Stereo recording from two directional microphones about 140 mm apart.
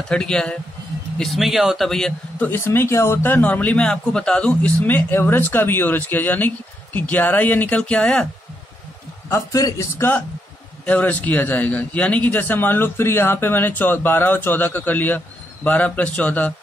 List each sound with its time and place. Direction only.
0.1 s a man's voice: 5° left (ahead or behind)
9.3 s a man's voice: 25° left (ahead or behind)